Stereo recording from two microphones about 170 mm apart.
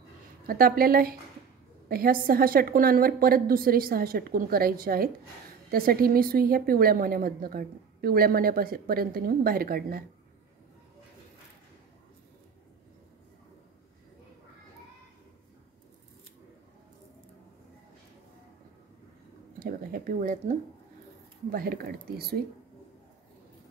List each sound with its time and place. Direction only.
0.5 s a woman's voice: 60° right (ahead or behind)
19.6 s speech: 55° right (ahead or behind)
21.5 s a woman's voice: 60° right (ahead or behind)